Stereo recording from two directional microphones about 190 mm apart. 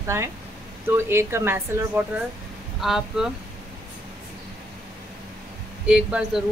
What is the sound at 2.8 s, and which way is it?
Speech, centre (ahead or behind).